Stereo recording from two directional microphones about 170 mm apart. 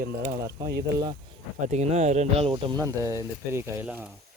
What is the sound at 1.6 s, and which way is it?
Speech, 40° right (ahead or behind).